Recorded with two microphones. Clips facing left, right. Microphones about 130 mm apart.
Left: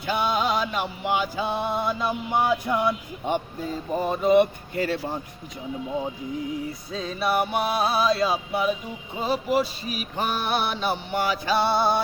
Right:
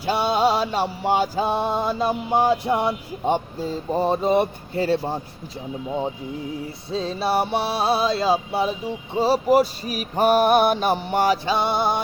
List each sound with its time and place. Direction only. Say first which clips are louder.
0.0 s music: right 5 dB; 35° right (ahead or behind)
6.9 s music: right 3 dB; 30° right (ahead or behind)
9.1 s a sound: right 6 dB; 35° right (ahead or behind)
11.4 s music: even; 20° right (ahead or behind)